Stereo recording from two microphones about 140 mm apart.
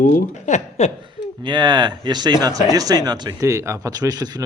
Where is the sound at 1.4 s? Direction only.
35° right (ahead or behind).